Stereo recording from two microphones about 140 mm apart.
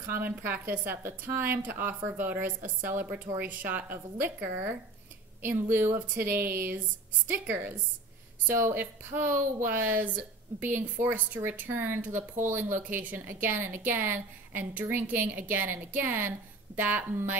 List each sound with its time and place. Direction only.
0.1 s speech: 15° right (ahead or behind)